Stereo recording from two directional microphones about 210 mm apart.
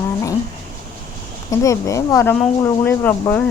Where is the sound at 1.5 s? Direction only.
15° left (ahead or behind).